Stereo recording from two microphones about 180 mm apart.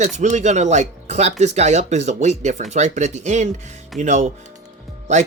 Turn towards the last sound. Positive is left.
turn(degrees=-40)  # may be behind; listen again after turning